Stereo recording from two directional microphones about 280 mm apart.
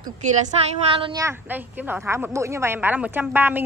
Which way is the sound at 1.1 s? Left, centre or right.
Centre.